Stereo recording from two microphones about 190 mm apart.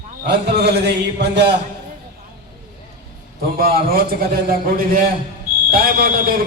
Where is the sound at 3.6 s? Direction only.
50° right (ahead or behind).